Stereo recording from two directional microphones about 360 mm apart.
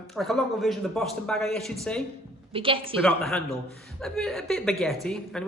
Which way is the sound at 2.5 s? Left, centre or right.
Centre.